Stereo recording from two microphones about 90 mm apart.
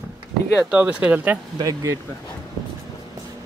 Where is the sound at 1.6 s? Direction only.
35° right (ahead or behind).